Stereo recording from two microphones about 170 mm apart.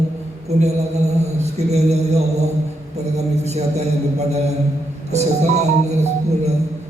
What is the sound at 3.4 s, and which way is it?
Music, 40° right (ahead or behind).